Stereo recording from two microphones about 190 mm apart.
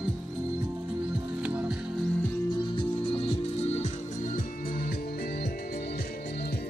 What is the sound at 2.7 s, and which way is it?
Music, 25° left (ahead or behind).